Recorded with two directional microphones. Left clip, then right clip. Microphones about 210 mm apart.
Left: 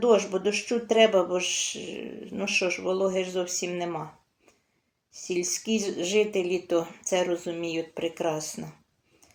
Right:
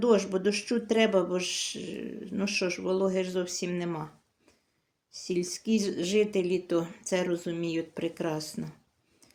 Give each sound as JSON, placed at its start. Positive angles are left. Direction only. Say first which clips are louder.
{"t": 0.0, "sound": "speech", "louder": "left 3 dB", "side_deg": -55}
{"t": 5.3, "sound": "speech", "louder": "left 2 dB", "side_deg": -55}